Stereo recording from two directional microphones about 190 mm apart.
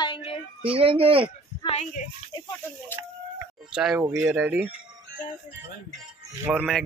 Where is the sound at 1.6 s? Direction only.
30° left (ahead or behind).